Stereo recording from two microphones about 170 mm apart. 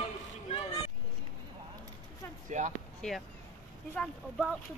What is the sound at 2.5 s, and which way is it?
Speech, 45° right (ahead or behind).